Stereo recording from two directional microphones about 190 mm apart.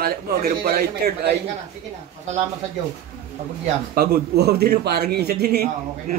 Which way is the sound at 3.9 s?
55° right (ahead or behind).